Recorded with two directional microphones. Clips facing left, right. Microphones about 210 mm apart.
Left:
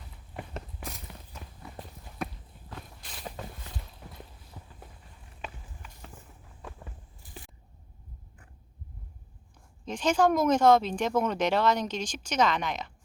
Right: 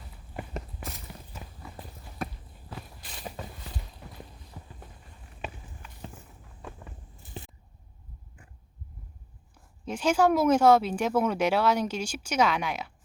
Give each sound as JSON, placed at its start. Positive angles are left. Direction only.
{"t": 0.3, "sound": "a sound", "side_deg": -5}
{"t": 2.1, "sound": "walk", "side_deg": 0}
{"t": 7.2, "sound": "biting", "side_deg": -25}
{"t": 9.8, "sound": "speech", "side_deg": -10}